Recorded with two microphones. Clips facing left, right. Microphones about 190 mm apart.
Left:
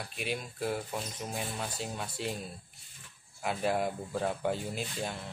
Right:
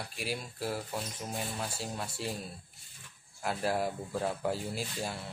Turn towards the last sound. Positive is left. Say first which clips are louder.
# even
turn(degrees=-5)  # may be behind; listen again after turning